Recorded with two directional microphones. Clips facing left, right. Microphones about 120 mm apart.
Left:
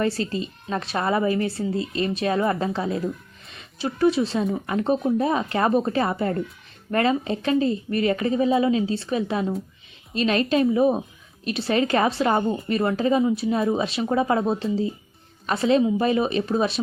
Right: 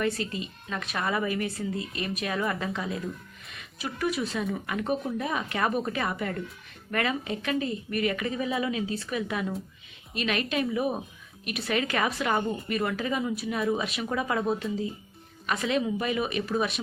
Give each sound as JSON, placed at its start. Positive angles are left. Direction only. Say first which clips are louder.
{"t": 0.0, "sound": "a woman's voice", "louder": "left 5 dB", "side_deg": 30}